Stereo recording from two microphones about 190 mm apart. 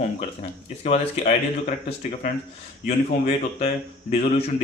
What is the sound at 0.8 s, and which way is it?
Speech, 35° left (ahead or behind).